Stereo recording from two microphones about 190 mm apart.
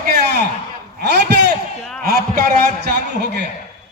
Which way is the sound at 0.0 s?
55° right (ahead or behind).